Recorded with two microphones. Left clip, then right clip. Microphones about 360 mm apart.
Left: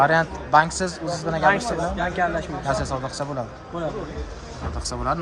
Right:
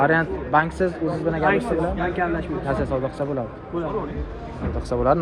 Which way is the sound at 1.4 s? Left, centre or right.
Left.